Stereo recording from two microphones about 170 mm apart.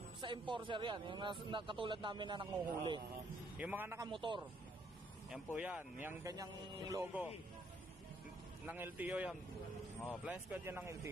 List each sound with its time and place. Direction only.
0.2 s a man's voice: 30° right (ahead or behind)
3.5 s a man's voice: 10° right (ahead or behind)
4.1 s a man's voice: 30° right (ahead or behind)
5.3 s a man's voice: 10° right (ahead or behind)
8.6 s a man's voice: 10° right (ahead or behind)